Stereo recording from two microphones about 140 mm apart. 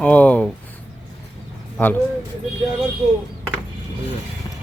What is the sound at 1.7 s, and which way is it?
Speech, 15° left (ahead or behind).